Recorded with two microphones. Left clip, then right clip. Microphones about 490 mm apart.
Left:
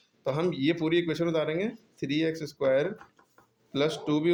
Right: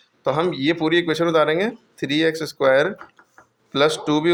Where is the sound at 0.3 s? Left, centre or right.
Left.